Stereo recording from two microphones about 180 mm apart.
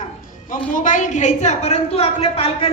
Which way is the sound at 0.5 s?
45° left (ahead or behind).